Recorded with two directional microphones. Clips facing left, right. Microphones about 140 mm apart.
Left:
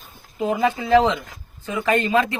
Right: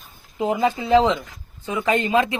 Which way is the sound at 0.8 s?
20° right (ahead or behind).